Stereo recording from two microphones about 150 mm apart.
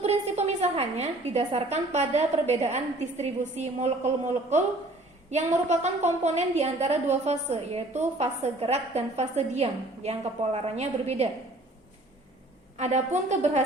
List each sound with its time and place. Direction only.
0.0 s a woman's voice: 45° right (ahead or behind)
12.7 s a woman's voice: 50° right (ahead or behind)